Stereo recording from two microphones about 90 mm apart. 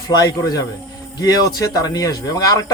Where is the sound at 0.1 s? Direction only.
50° left (ahead or behind).